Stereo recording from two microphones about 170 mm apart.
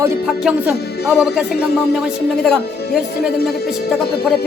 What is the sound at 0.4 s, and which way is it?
Speech, 5° right (ahead or behind).